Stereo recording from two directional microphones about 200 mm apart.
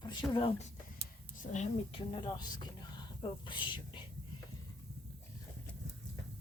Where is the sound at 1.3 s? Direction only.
40° left (ahead or behind).